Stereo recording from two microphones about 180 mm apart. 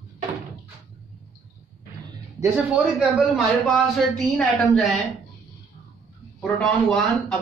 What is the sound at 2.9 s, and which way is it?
A man's voice, 5° right (ahead or behind).